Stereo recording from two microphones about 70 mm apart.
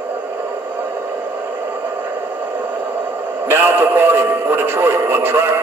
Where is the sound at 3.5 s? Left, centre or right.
Right.